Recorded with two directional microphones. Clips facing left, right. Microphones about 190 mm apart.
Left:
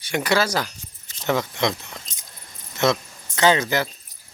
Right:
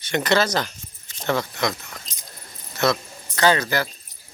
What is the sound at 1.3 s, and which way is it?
Speech, 20° left (ahead or behind).